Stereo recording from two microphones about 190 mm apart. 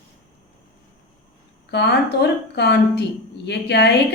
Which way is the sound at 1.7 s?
60° left (ahead or behind).